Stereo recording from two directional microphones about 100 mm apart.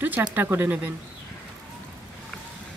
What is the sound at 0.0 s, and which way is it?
Speech, 20° right (ahead or behind).